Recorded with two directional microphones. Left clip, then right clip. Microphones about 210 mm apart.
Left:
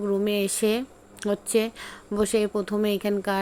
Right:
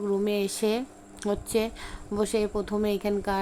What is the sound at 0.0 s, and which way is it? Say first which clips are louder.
Speech: left 2 dB; 5° left (ahead or behind).